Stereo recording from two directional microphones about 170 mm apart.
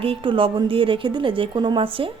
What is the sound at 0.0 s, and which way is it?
A woman's voice, 30° right (ahead or behind).